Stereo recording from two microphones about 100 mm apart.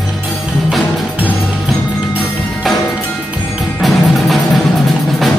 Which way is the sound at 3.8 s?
Centre (ahead or behind).